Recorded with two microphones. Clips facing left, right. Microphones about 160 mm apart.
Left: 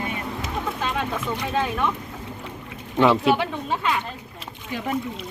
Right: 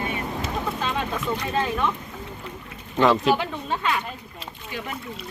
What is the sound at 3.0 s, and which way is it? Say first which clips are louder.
Speech: left 1 dB; 5° left (ahead or behind).